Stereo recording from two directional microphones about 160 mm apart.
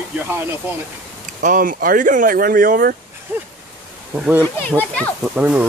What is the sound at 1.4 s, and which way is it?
Speech, 55° right (ahead or behind).